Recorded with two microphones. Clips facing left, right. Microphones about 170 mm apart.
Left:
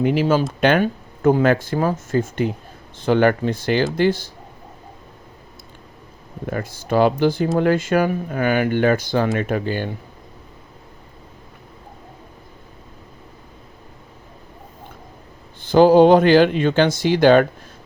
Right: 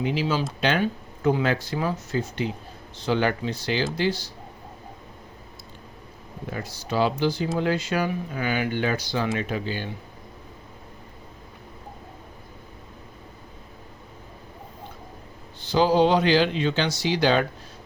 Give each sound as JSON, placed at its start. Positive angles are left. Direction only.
{"t": 0.0, "sound": "speech", "side_deg": 50}
{"t": 6.4, "sound": "speech", "side_deg": 50}
{"t": 15.6, "sound": "speech", "side_deg": 50}